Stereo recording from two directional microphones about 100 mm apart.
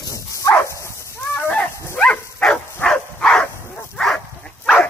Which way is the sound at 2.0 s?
10° left (ahead or behind).